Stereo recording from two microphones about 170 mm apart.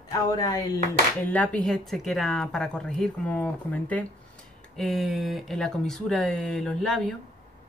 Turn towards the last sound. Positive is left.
turn(degrees=5)  # may be behind; listen again after turning